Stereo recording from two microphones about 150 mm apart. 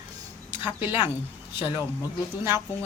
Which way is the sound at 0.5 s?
15° right (ahead or behind).